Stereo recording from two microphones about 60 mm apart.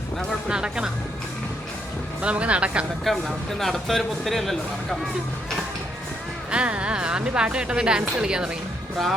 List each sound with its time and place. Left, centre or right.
0.4 s music: centre
2.2 s speech: right
3.0 s speech: centre
6.5 s speech: centre